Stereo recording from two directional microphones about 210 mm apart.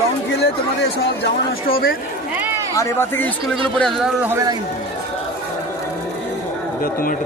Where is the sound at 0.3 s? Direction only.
55° left (ahead or behind).